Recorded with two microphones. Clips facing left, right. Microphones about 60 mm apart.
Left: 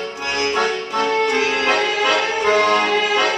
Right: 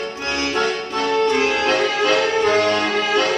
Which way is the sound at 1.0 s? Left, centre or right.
Left.